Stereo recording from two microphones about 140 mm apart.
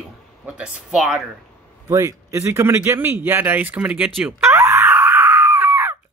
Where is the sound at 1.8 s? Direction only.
20° right (ahead or behind).